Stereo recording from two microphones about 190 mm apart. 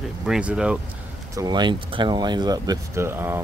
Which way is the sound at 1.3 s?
20° right (ahead or behind).